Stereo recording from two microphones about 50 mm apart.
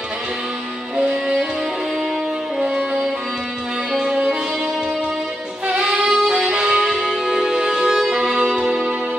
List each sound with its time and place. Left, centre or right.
2.6 s music: centre
5.7 s music: centre